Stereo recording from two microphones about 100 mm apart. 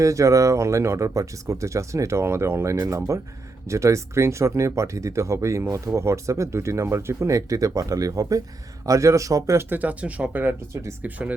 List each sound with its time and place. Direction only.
0.0 s speech: 30° right (ahead or behind)
2.7 s speech: 35° right (ahead or behind); by 11.3 s 15° right (ahead or behind)